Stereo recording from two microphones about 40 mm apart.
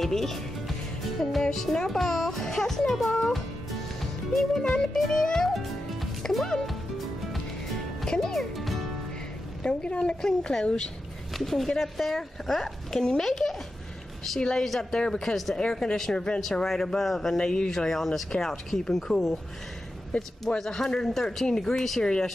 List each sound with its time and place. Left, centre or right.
0.0 s music: centre
1.4 s a child's voice: centre
4.0 s music: centre
4.9 s a child's voice: centre
5.5 s music: centre
8.0 s speech: centre
9.7 s a woman's voice: left
11.3 s a child's voice: centre
14.6 s a child's voice: centre
15.5 s a child's voice: centre
17.4 s a woman's voice: left
17.6 s a child's voice: centre